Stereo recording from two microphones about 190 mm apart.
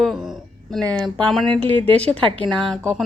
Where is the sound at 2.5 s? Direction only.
Centre (ahead or behind).